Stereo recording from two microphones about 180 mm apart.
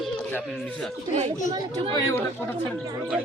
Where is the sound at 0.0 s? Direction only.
5° left (ahead or behind).